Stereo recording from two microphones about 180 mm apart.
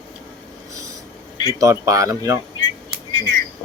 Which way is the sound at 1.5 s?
15° right (ahead or behind).